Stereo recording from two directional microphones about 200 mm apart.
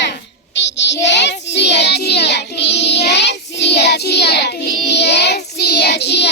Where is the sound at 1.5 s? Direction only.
55° left (ahead or behind).